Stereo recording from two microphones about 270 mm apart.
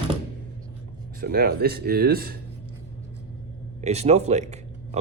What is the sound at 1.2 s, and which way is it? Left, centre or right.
Speech, right.